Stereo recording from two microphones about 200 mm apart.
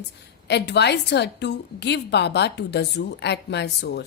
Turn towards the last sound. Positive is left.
turn(degrees=55)  # may be behind; listen again after turning